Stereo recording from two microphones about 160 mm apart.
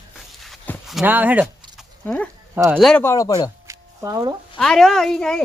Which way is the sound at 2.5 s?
10° right (ahead or behind).